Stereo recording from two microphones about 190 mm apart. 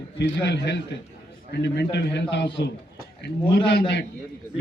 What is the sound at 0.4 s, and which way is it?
A man's voice, 65° left (ahead or behind).